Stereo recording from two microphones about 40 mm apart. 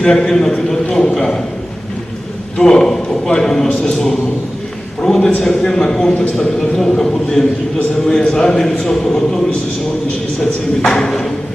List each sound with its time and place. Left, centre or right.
0.0 s a man's voice: centre
2.6 s a man's voice: centre
5.0 s a man's voice: centre
10.8 s a man's voice: centre